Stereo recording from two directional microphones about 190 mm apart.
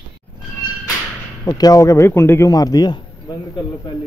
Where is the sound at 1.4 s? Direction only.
20° left (ahead or behind).